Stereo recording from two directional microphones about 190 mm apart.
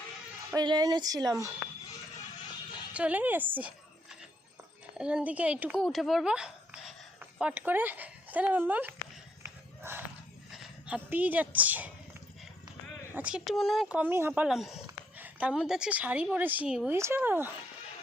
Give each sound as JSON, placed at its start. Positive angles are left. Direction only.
{"t": 0.5, "sound": "speech", "side_deg": -20}
{"t": 2.9, "sound": "speech", "side_deg": -5}
{"t": 4.9, "sound": "speech", "side_deg": -5}
{"t": 9.4, "sound": "a sound", "side_deg": -10}
{"t": 10.5, "sound": "speech", "side_deg": -5}
{"t": 13.1, "sound": "a woman's voice", "side_deg": -5}